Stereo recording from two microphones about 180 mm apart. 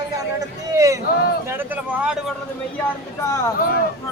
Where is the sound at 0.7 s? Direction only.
20° right (ahead or behind).